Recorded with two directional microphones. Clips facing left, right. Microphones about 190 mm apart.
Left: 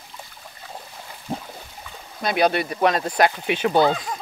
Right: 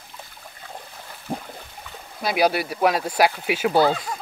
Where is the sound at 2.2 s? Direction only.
5° right (ahead or behind).